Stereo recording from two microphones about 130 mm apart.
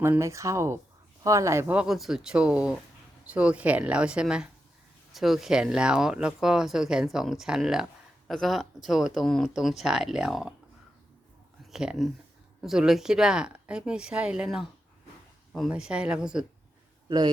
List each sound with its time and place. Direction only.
0.0 s a woman's voice: 20° right (ahead or behind); by 10.5 s 5° right (ahead or behind)
11.7 s a woman's voice: 5° right (ahead or behind)
15.7 s a woman's voice: 10° right (ahead or behind)
17.1 s a man's voice: 30° right (ahead or behind)